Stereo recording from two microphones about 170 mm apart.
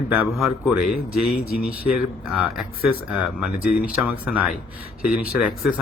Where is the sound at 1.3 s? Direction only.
60° left (ahead or behind).